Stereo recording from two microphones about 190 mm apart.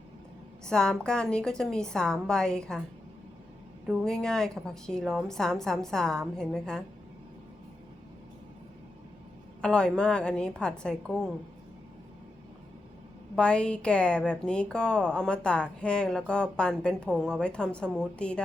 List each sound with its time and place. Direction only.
0.7 s a woman's voice: 5° left (ahead or behind)
3.8 s a woman's voice: centre (ahead or behind)
9.6 s a woman's voice: 5° left (ahead or behind)
13.3 s a woman's voice: 5° left (ahead or behind)